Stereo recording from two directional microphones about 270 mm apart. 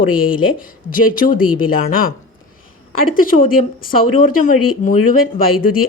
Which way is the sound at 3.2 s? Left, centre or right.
Left.